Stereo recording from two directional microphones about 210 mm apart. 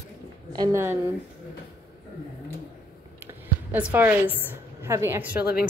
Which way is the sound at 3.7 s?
10° right (ahead or behind).